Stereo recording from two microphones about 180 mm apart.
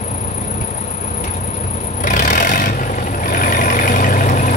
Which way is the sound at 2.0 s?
45° left (ahead or behind).